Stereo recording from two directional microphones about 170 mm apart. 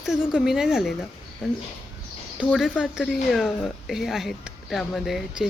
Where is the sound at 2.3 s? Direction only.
5° right (ahead or behind).